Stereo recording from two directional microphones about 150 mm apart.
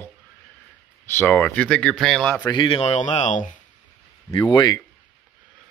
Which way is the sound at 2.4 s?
35° left (ahead or behind).